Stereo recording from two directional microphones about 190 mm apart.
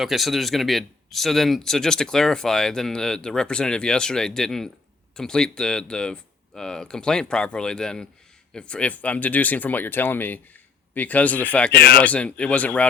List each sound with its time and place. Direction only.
0.0 s speech: centre (ahead or behind)
11.8 s speech: 50° left (ahead or behind)
12.0 s speech: 5° left (ahead or behind)